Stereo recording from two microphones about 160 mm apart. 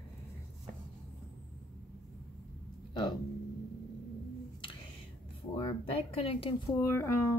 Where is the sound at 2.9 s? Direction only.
25° left (ahead or behind).